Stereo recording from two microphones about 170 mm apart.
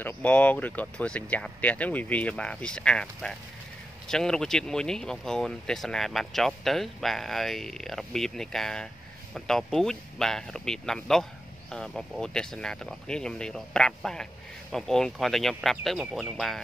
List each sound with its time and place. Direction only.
0.0 s speech: 10° left (ahead or behind)